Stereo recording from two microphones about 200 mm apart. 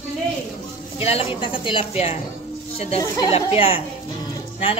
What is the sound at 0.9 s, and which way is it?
A woman's voice, 30° left (ahead or behind).